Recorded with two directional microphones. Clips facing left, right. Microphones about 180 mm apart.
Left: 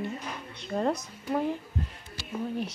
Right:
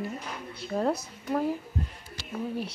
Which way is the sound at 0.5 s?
5° right (ahead or behind).